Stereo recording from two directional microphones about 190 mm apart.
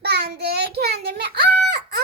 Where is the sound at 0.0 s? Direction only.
60° right (ahead or behind).